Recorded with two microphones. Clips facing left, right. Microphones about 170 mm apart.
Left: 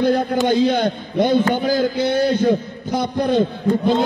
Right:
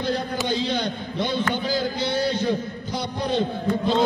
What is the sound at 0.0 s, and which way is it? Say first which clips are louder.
A man's voice: left 9 dB; 50° left (ahead or behind).